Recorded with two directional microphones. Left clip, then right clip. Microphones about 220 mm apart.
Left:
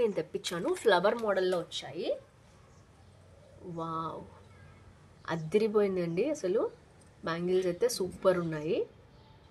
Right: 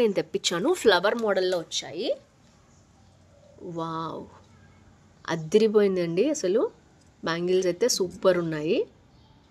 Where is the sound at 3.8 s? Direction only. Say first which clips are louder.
Right 4 dB; 40° right (ahead or behind).